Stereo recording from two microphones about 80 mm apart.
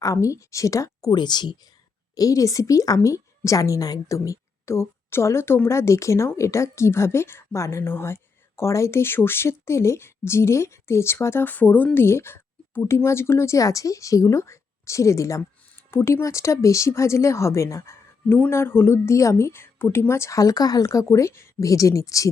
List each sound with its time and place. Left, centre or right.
0.0 s a woman's voice: left
1.1 s speech: left
2.1 s a woman's voice: left
11.9 s a sound: left
13.0 s a woman's voice: left
18.3 s a woman's voice: left